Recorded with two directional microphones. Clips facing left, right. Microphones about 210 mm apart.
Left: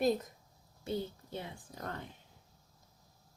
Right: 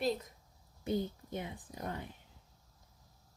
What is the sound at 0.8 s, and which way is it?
A woman's voice, 15° right (ahead or behind).